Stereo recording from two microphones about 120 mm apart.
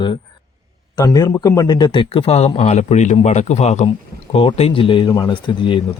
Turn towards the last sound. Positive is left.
turn(degrees=45)  # may be behind; listen again after turning